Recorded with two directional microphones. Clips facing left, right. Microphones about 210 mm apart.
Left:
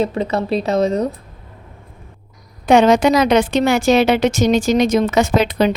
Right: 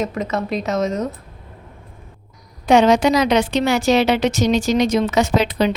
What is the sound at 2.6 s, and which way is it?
A woman's voice, 55° left (ahead or behind).